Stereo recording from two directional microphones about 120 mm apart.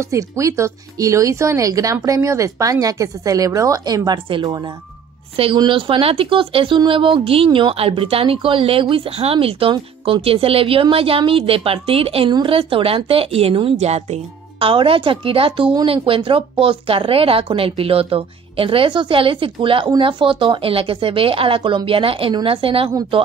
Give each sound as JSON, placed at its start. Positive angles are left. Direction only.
{"t": 0.0, "sound": "speech", "side_deg": -25}
{"t": 5.3, "sound": "a woman's voice", "side_deg": -50}